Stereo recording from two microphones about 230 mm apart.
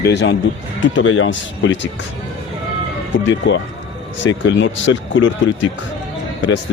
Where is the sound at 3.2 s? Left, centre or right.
Left.